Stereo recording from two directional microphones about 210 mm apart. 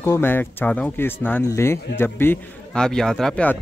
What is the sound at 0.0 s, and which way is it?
A man's voice, 10° left (ahead or behind).